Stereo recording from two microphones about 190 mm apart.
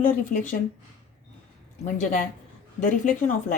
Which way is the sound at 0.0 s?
45° left (ahead or behind).